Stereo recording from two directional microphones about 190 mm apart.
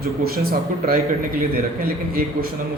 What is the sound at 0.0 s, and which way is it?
A man's voice, 50° right (ahead or behind).